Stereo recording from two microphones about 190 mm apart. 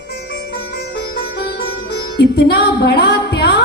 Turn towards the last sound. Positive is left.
turn(degrees=55)  # may be behind; listen again after turning